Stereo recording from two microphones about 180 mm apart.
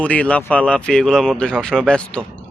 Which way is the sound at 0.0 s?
5° left (ahead or behind).